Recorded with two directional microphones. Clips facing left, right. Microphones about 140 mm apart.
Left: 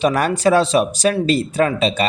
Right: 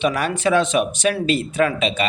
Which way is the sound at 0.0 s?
45° left (ahead or behind).